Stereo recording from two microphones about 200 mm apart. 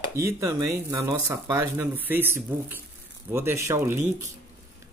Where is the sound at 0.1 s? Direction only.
15° right (ahead or behind).